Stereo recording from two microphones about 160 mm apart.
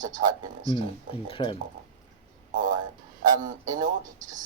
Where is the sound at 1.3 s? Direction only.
30° left (ahead or behind).